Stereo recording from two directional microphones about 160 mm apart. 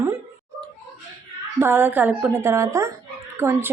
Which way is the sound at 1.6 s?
15° right (ahead or behind).